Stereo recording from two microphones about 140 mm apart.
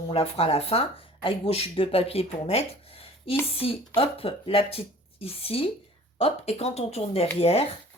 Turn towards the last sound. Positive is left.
turn(degrees=45)  # may be behind; listen again after turning